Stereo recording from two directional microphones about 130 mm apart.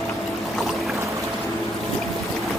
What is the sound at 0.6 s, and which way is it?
Boat, centre (ahead or behind).